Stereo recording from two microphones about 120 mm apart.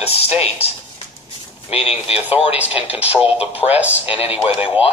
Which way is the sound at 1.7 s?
55° left (ahead or behind).